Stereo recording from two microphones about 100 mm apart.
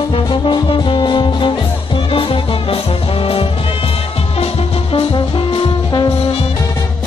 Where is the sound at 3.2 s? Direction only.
70° left (ahead or behind).